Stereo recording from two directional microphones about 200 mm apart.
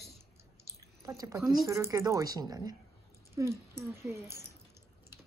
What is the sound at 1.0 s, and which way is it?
Speech, 15° right (ahead or behind).